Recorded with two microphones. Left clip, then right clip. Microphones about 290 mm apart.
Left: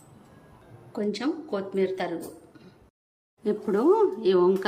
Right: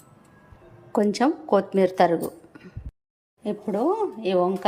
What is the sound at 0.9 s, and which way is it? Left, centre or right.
Speech, centre.